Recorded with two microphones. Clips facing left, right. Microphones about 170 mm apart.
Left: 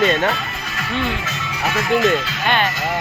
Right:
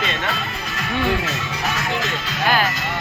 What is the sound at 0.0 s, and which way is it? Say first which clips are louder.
Speech: left 9 dB; 45° left (ahead or behind).